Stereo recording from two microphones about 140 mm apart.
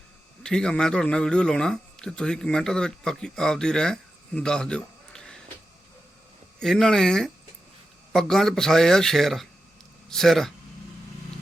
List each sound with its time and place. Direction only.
0.4 s speech: 5° left (ahead or behind)
6.6 s speech: 5° left (ahead or behind)